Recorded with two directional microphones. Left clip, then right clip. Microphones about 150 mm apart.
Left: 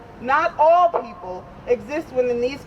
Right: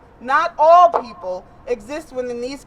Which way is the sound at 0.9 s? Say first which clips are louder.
Right 3 dB; 35° right (ahead or behind).